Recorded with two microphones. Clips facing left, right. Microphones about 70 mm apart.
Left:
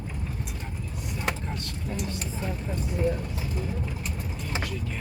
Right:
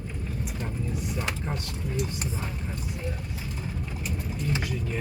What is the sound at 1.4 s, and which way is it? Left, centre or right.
Speech, centre.